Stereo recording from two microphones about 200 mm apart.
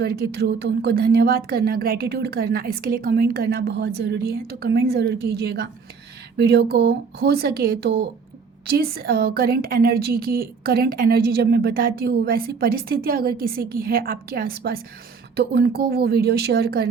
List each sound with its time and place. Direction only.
0.0 s a woman's voice: 50° right (ahead or behind)